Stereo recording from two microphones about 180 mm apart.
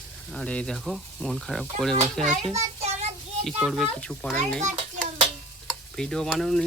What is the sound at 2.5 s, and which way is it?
Speech, 40° right (ahead or behind).